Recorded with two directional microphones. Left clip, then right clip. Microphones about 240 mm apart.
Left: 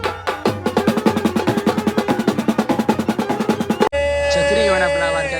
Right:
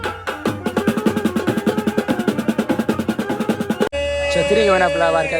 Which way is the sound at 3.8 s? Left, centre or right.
Left.